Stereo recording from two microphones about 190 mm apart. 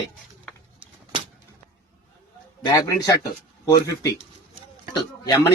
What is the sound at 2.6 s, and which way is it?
A man's voice, 15° left (ahead or behind).